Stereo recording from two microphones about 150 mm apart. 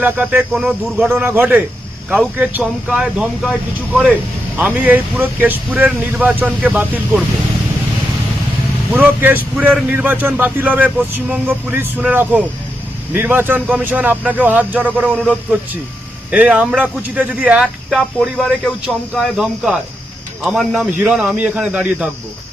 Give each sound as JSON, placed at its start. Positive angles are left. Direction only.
{"t": 0.0, "sound": "speech", "side_deg": -10}
{"t": 4.5, "sound": "speech", "side_deg": -10}
{"t": 8.9, "sound": "speech", "side_deg": -10}